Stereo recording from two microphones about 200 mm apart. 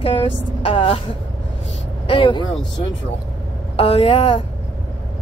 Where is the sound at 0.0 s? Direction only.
30° left (ahead or behind).